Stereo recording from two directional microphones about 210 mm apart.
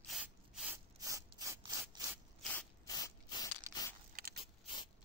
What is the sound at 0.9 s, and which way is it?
Rub, 15° right (ahead or behind).